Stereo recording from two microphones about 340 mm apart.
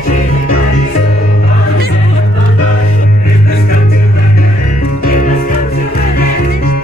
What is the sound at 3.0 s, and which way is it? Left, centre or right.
Music, left.